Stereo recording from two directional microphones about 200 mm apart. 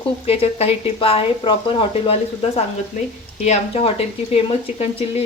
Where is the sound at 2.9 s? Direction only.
40° left (ahead or behind).